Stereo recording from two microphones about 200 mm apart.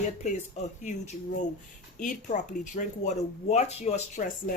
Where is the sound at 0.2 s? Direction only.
35° left (ahead or behind).